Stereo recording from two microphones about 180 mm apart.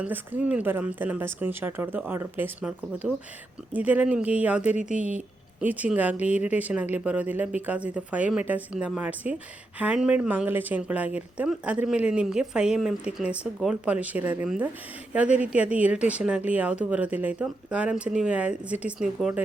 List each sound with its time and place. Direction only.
0.0 s speech: 10° right (ahead or behind)